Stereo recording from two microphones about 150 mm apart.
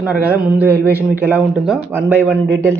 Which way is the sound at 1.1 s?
10° right (ahead or behind).